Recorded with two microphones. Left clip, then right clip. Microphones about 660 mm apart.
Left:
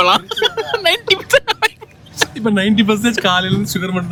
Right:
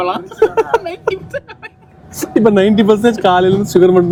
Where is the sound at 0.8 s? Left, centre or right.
Left.